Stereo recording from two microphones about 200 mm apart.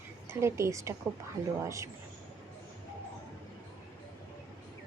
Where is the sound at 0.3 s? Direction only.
15° right (ahead or behind).